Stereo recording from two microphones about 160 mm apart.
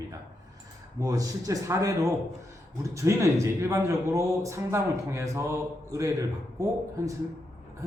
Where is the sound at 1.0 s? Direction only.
20° right (ahead or behind).